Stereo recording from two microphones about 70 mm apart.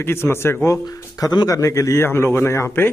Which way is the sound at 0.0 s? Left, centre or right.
Left.